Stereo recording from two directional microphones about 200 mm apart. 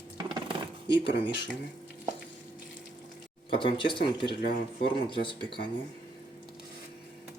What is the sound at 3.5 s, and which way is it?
Speech, 25° left (ahead or behind).